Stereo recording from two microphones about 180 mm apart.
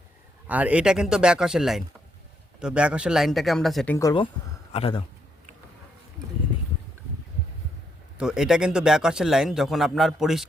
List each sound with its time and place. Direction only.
0.4 s speech: 10° right (ahead or behind)
3.9 s a man's voice: 20° left (ahead or behind)
8.2 s speech: 5° right (ahead or behind)